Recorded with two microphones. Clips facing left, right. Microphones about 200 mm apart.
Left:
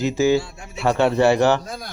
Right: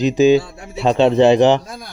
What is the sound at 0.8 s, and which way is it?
Speech, 20° right (ahead or behind).